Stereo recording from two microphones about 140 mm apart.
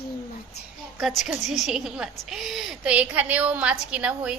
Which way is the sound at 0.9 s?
Centre (ahead or behind).